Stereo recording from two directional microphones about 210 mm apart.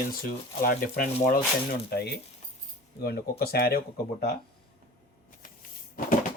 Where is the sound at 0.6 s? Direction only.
40° left (ahead or behind).